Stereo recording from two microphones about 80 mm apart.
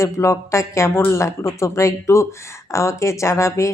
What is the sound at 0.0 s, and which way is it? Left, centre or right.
Speech, left.